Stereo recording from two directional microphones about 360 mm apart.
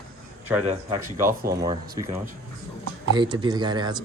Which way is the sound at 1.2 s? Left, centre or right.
Right.